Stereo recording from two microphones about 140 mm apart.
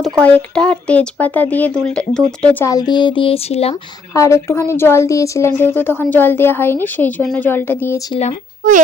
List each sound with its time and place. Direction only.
0.0 s speech: 10° left (ahead or behind)
2.6 s speech: 30° left (ahead or behind); by 3.8 s 45° left (ahead or behind)
4.1 s speech: 20° left (ahead or behind)
8.6 s speech: 75° right (ahead or behind)